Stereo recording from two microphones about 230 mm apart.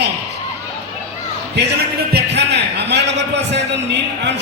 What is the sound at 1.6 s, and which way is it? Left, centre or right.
A man's voice, right.